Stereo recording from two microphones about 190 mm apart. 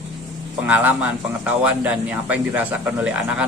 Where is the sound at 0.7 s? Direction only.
10° right (ahead or behind).